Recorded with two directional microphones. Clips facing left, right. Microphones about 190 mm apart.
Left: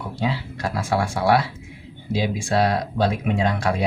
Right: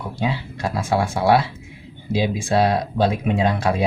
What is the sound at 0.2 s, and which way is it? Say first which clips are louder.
Speech: right 1 dB; 20° right (ahead or behind).